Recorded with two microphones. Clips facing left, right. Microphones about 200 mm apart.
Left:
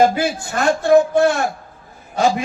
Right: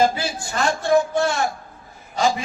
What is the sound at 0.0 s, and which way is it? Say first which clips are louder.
A man's voice: left 5 dB; 55° left (ahead or behind).